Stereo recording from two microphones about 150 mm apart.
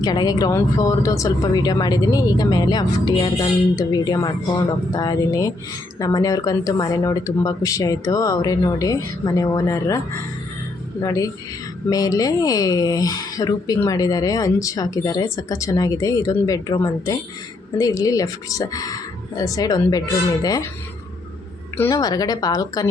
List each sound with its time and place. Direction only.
0.0 s speech: 25° left (ahead or behind)
11.0 s speech: 25° left (ahead or behind)
21.8 s speech: 20° left (ahead or behind)